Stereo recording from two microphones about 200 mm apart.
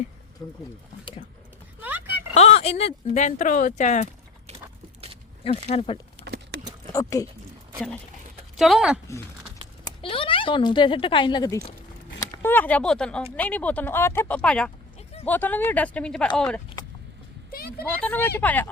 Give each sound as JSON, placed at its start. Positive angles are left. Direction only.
{"t": 0.4, "sound": "speech", "side_deg": 15}
{"t": 1.8, "sound": "a sound", "side_deg": -10}
{"t": 2.3, "sound": "speech", "side_deg": 30}
{"t": 5.4, "sound": "speech", "side_deg": 30}
{"t": 6.2, "sound": "a sound", "side_deg": -55}
{"t": 6.9, "sound": "speech", "side_deg": 15}
{"t": 8.5, "sound": "speech", "side_deg": 0}
{"t": 9.8, "sound": "speech", "side_deg": 25}
{"t": 17.5, "sound": "speech", "side_deg": 50}
{"t": 18.0, "sound": "speech", "side_deg": 10}